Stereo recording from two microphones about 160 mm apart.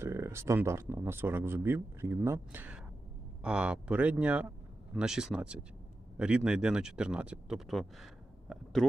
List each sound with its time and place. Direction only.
0.0 s speech: 15° right (ahead or behind); by 8.9 s centre (ahead or behind)